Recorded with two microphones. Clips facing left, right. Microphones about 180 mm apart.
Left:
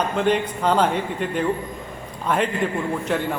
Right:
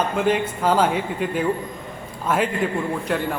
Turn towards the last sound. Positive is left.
turn(degrees=-5)  # may be behind; listen again after turning